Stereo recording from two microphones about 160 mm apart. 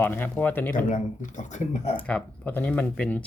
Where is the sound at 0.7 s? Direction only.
55° left (ahead or behind).